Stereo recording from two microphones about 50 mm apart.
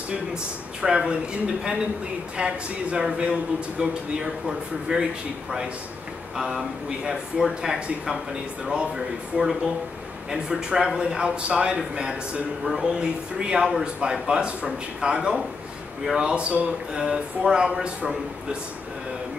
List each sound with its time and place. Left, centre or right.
0.1 s speech: centre
2.3 s speech: right
6.3 s speech: centre